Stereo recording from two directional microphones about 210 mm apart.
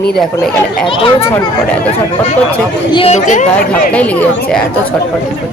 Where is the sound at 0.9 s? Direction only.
25° left (ahead or behind).